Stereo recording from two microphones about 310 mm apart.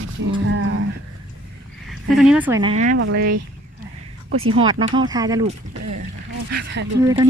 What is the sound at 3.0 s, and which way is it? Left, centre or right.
Speech, right.